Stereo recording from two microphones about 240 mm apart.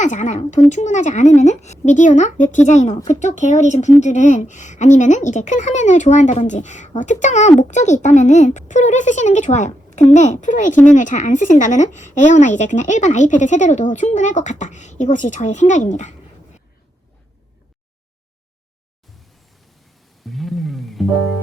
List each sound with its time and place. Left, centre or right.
0.0 s a woman's voice: left
20.2 s music: centre